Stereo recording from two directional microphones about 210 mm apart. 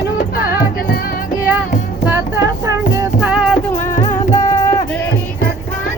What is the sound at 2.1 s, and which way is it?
Music, 15° right (ahead or behind).